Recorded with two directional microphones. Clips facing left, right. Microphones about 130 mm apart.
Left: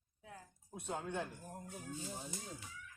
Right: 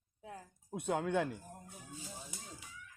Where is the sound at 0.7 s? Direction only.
65° right (ahead or behind).